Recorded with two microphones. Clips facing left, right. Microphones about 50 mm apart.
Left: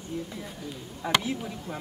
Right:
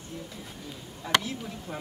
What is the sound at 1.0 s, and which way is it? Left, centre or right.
Speech, centre.